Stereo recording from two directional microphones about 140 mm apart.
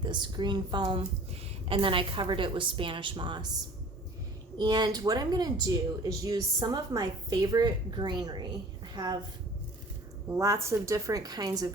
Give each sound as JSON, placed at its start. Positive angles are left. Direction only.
{"t": 0.0, "sound": "speech", "side_deg": -35}
{"t": 4.5, "sound": "speech", "side_deg": -30}
{"t": 10.2, "sound": "speech", "side_deg": -20}